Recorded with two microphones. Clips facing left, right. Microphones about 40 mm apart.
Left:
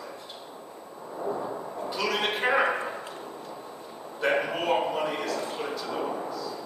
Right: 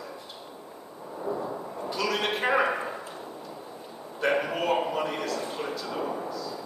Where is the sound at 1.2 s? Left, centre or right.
Centre.